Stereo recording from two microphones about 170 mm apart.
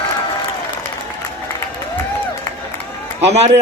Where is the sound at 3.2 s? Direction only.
40° right (ahead or behind).